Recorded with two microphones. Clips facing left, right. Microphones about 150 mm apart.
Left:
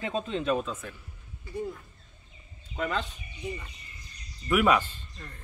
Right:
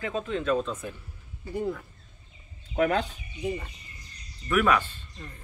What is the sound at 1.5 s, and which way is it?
Speech, 80° right.